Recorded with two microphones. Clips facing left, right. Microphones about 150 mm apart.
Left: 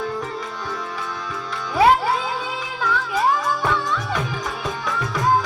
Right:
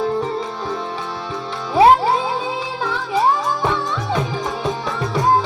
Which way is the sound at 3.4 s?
25° right (ahead or behind).